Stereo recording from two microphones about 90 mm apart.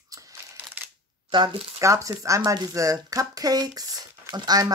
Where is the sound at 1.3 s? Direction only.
60° right (ahead or behind).